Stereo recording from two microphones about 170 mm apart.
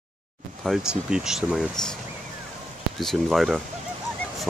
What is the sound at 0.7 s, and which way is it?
Speech, 5° right (ahead or behind).